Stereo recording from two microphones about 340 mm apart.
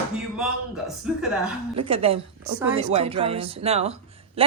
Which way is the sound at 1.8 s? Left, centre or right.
Centre.